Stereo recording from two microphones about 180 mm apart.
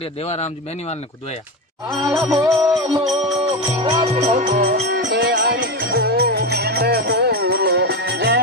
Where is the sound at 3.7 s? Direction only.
30° right (ahead or behind); by 4.7 s 50° right (ahead or behind).